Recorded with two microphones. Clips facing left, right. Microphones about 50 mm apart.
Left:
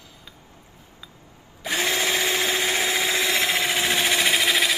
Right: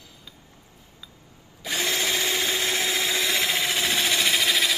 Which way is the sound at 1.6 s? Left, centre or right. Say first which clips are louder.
Left 3 dB; centre.